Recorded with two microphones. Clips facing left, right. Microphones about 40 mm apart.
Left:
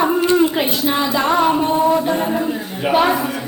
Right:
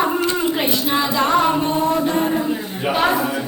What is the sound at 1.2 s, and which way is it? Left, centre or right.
A capella, centre.